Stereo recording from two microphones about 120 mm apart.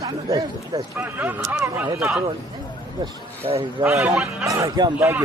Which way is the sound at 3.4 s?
45° right (ahead or behind).